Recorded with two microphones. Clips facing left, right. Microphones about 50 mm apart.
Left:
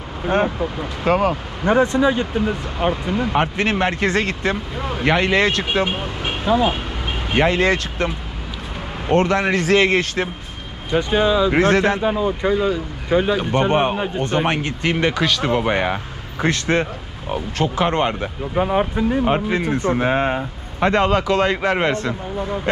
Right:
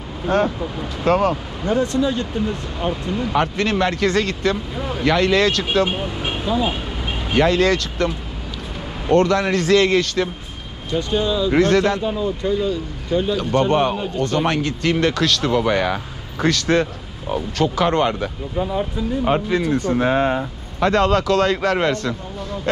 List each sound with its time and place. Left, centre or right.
0.3 s speech: centre
1.9 s speech: left
15.5 s speech: left
18.6 s speech: left
19.2 s speech: left